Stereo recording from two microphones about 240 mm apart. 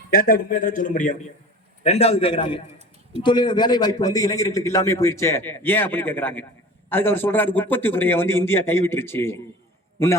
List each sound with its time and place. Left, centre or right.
0.1 s a man's voice: left; by 9.4 s centre